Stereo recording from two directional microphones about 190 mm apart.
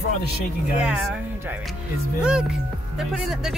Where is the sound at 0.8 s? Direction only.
5° right (ahead or behind).